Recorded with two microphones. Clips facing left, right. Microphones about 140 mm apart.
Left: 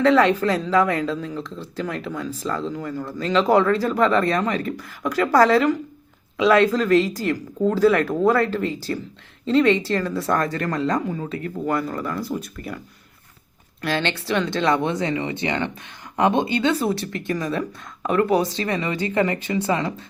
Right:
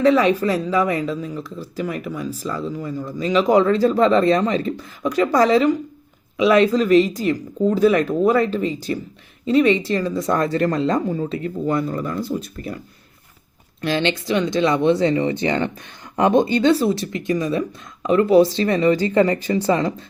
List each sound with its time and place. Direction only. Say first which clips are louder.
0.2 s speech: even; 10° right (ahead or behind); by 12.8 s 30° right (ahead or behind)
13.8 s speech: right 3 dB; 20° right (ahead or behind)
14.8 s speech: right 7 dB; 30° right (ahead or behind)
17.2 s speech: right 4 dB; 20° right (ahead or behind); by 19.9 s 35° right (ahead or behind)